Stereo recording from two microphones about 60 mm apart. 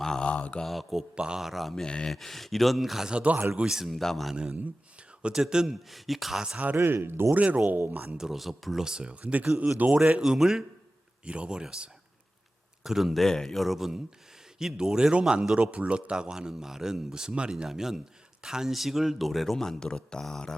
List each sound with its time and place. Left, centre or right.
0.0 s mantra: centre
0.3 s mantra: left
0.6 s speech: centre
1.1 s speech: centre
1.4 s speech: centre
3.1 s speech: centre
5.3 s speech: centre
5.9 s speech: centre
6.8 s speech: right
7.3 s speech: right
8.2 s speech: centre; by 10.0 s right
10.0 s speech: centre
17.7 s speech: centre